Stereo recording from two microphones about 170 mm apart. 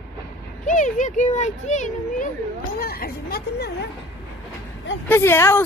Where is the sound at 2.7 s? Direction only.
60° left (ahead or behind).